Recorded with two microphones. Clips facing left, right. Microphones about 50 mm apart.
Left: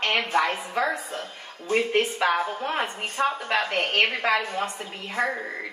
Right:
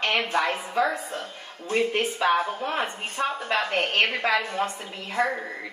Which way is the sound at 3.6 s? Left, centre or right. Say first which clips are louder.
Even; right.